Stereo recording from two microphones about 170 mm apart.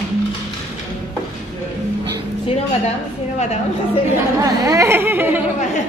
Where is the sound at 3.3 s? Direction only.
40° left (ahead or behind).